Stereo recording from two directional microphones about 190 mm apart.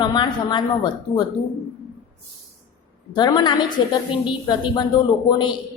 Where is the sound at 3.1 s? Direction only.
20° left (ahead or behind).